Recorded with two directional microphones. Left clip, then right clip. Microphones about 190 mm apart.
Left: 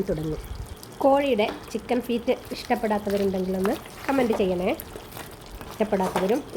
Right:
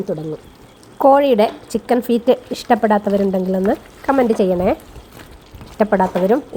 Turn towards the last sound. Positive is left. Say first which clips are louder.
# right 9 dB
turn(degrees=-20)  # may be behind; listen again after turning